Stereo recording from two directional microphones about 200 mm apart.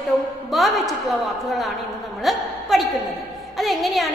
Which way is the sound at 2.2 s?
Centre (ahead or behind).